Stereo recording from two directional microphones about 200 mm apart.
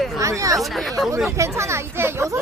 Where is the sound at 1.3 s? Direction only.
15° right (ahead or behind).